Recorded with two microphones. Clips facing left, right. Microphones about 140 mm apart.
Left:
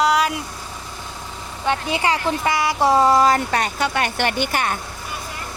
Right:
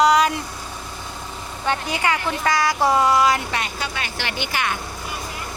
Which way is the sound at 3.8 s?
55° left (ahead or behind).